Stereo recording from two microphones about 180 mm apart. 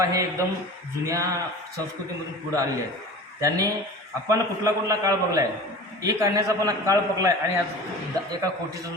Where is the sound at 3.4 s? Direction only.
20° right (ahead or behind).